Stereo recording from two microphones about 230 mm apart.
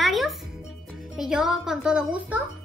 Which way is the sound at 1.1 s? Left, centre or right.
Centre.